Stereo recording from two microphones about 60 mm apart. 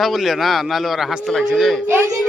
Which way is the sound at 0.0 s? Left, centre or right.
Centre.